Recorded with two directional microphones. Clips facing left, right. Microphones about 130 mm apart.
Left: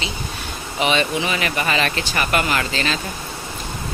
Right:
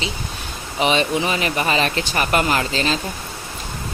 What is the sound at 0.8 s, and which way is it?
Speech, 35° right (ahead or behind).